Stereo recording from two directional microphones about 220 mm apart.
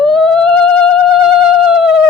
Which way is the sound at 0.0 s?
5° left (ahead or behind).